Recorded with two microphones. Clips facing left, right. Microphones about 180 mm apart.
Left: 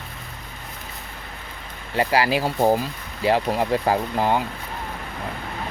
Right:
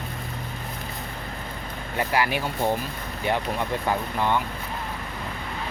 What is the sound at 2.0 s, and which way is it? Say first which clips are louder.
Speech: left 4 dB; 90° left.